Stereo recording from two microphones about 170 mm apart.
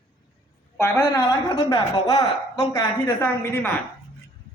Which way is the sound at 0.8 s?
15° left (ahead or behind).